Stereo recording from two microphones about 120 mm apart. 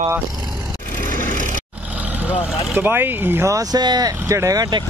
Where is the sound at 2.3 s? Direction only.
15° right (ahead or behind).